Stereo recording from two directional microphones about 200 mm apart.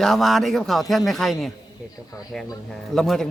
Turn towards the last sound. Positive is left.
turn(degrees=0)  # may be behind; listen again after turning